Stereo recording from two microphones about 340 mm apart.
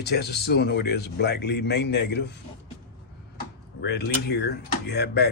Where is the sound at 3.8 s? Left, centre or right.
Left.